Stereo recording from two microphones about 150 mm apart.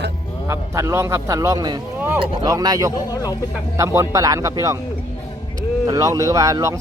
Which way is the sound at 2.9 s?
25° left (ahead or behind).